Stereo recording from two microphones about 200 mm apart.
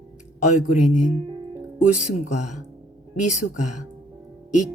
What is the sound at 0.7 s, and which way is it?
Speech, 40° left (ahead or behind).